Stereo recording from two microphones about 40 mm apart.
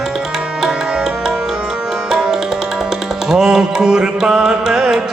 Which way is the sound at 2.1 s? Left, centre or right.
Centre.